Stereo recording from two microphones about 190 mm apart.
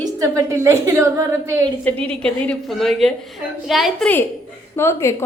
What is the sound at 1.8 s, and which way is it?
A woman's voice, 5° left (ahead or behind).